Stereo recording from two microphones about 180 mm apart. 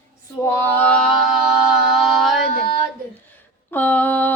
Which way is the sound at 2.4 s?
55° right (ahead or behind).